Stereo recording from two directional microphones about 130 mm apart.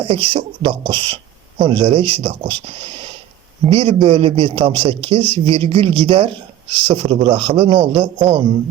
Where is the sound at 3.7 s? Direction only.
45° right (ahead or behind).